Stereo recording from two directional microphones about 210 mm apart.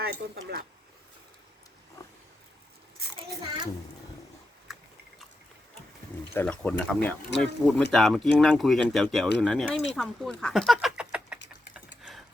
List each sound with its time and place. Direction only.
0.0 s speech: 45° right (ahead or behind)
2.0 s a sound: 15° left (ahead or behind)
6.3 s speech: 5° left (ahead or behind)